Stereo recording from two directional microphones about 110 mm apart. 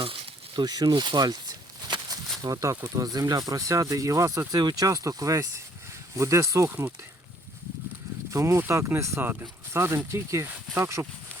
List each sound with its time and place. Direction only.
0.0 s a sound: 55° right (ahead or behind)
0.6 s speech: 40° right (ahead or behind)
2.4 s speech: 30° right (ahead or behind)
8.3 s speech: 25° right (ahead or behind)